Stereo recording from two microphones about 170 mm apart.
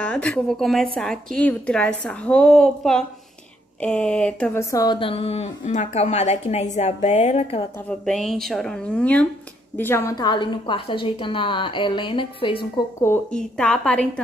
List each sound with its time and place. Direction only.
0.0 s a woman's voice: 5° left (ahead or behind)
4.6 s a woman's voice: 20° left (ahead or behind); by 7.6 s 40° left (ahead or behind)
8.0 s a woman's voice: centre (ahead or behind); by 12.8 s 30° left (ahead or behind)
13.0 s a woman's voice: 10° left (ahead or behind)